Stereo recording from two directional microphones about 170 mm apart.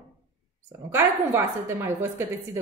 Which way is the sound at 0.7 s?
15° right (ahead or behind).